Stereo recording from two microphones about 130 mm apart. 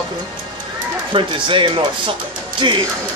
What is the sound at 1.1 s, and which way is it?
Speech, 40° right (ahead or behind).